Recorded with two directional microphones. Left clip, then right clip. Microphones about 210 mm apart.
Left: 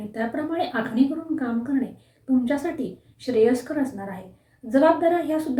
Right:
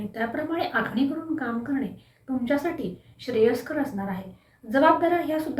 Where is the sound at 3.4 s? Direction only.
5° left (ahead or behind).